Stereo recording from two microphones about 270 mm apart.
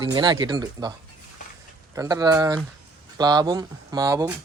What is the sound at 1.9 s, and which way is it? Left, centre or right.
Speech, centre.